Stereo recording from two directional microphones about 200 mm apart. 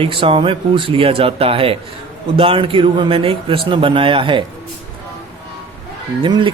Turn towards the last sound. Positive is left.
turn(degrees=-25)  # may be behind; listen again after turning